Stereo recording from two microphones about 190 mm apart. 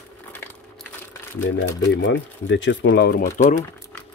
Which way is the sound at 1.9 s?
75° left (ahead or behind).